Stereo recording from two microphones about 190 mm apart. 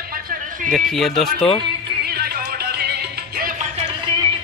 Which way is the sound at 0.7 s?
Centre (ahead or behind).